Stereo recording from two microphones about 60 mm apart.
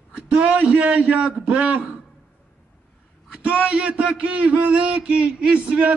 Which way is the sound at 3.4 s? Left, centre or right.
Centre.